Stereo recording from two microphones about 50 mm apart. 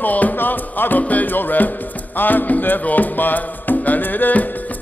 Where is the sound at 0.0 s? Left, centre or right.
Left.